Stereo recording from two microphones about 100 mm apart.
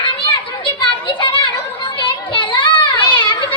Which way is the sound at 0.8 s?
55° left (ahead or behind).